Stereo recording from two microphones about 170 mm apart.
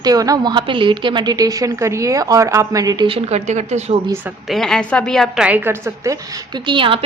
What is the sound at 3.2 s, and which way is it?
Speech, 40° right (ahead or behind).